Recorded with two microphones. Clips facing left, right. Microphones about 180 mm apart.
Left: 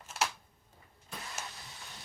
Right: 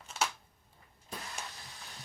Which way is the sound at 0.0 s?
5° left (ahead or behind).